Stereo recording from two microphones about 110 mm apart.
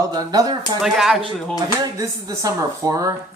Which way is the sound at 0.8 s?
5° right (ahead or behind).